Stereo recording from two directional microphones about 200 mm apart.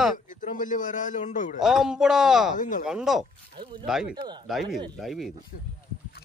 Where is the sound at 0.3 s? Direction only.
40° left (ahead or behind).